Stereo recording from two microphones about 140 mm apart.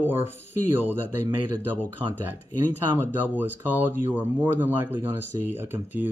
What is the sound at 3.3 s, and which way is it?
Speech, 10° right (ahead or behind).